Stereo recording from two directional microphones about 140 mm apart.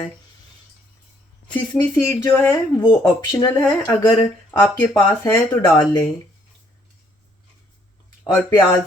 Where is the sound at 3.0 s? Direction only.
30° left (ahead or behind).